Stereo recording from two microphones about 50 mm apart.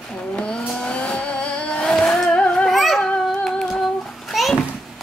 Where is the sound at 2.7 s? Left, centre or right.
Centre.